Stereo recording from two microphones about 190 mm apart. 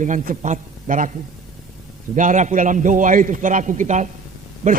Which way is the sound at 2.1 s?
40° right (ahead or behind).